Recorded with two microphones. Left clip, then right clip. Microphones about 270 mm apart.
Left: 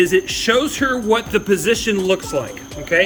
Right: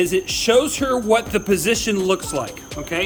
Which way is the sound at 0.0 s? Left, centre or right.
Centre.